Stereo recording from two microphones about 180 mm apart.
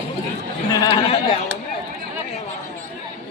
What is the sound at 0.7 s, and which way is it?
Speech, 25° left (ahead or behind).